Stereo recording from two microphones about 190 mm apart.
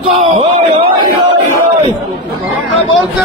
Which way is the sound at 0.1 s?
30° right (ahead or behind).